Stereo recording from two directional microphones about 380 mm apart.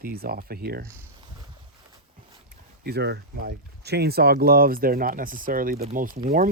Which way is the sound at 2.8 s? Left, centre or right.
Right.